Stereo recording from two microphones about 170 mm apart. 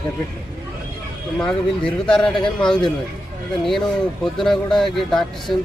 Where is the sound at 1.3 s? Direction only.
5° left (ahead or behind).